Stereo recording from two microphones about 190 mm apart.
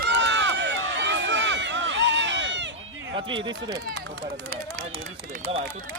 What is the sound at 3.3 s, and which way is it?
Speech, 25° right (ahead or behind).